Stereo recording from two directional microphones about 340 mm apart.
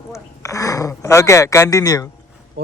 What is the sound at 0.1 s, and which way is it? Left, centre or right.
Speech, centre.